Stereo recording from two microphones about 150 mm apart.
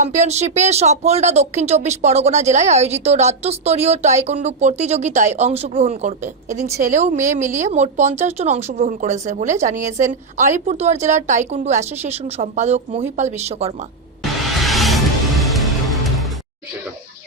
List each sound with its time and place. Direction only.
0.0 s speech: 50° right (ahead or behind)
14.2 s music: centre (ahead or behind)